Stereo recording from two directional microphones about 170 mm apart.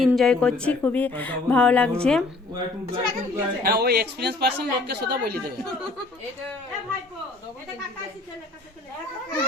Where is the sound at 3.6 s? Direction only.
70° right (ahead or behind).